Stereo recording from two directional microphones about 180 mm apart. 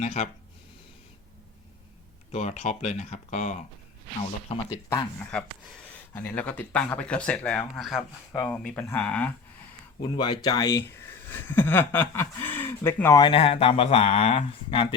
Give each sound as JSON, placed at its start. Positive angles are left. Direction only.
{"t": 0.0, "sound": "speech", "side_deg": 40}
{"t": 2.3, "sound": "speech", "side_deg": 40}
{"t": 4.9, "sound": "speech", "side_deg": 10}
{"t": 10.0, "sound": "speech", "side_deg": 25}
{"t": 13.1, "sound": "speech", "side_deg": 30}